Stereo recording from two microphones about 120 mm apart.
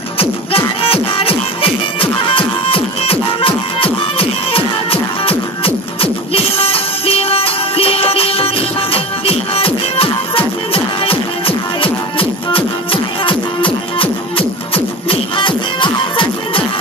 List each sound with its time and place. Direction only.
0.2 s music: 50° left (ahead or behind)